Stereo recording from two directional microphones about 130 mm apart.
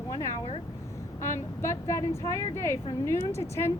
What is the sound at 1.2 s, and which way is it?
A woman's voice, 20° left (ahead or behind).